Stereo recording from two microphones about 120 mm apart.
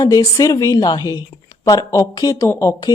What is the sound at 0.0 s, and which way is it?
A woman's voice, 25° left (ahead or behind).